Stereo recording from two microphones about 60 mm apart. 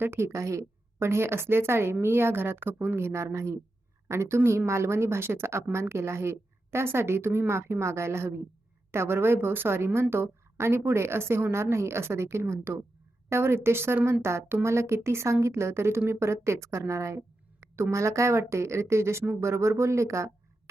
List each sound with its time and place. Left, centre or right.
0.0 s a woman's voice: right
0.3 s a woman's voice: right